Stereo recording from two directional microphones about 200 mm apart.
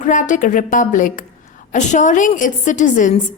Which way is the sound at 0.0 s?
40° left (ahead or behind).